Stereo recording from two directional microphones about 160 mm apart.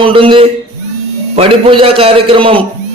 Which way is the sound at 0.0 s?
35° right (ahead or behind).